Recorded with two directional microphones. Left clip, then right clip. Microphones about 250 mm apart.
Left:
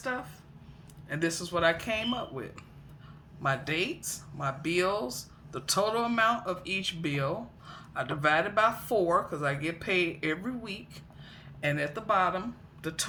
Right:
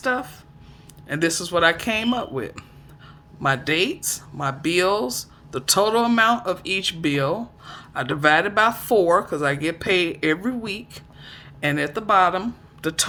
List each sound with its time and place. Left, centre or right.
0.0 s speech: right